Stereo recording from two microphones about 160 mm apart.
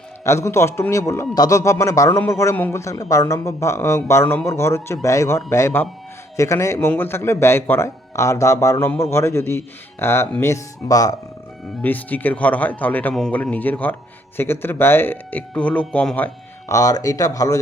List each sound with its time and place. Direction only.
0.3 s a man's voice: 15° left (ahead or behind)
11.8 s a man's voice: 10° left (ahead or behind)